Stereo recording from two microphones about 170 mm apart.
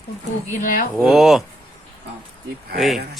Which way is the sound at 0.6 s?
50° left (ahead or behind).